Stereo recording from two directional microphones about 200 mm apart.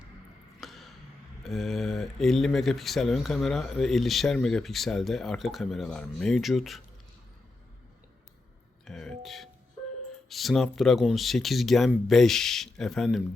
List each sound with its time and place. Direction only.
0.6 s a sound: centre (ahead or behind)
1.5 s speech: centre (ahead or behind)
8.8 s speech: centre (ahead or behind)